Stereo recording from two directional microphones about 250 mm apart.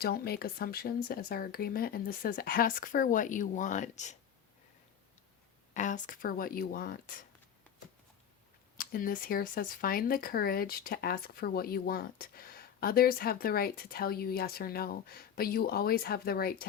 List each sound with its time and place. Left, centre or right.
0.0 s speech: left
5.7 s speech: left
8.8 s speech: left